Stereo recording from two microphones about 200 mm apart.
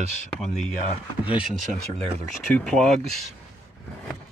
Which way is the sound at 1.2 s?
5° right (ahead or behind).